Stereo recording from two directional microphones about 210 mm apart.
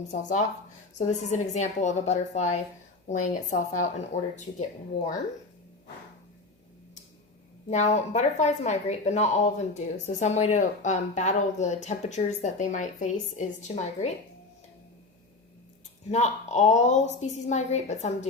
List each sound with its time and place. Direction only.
0.1 s speech: 35° left (ahead or behind)
7.7 s speech: 35° left (ahead or behind)
16.1 s speech: 35° left (ahead or behind)